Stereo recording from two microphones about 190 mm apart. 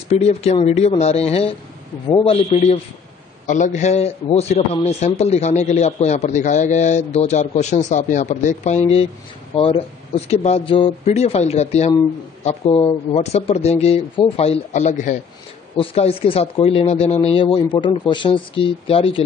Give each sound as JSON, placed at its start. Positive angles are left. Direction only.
{"t": 0.1, "sound": "a man's voice", "side_deg": 35}
{"t": 2.5, "sound": "a man's voice", "side_deg": 35}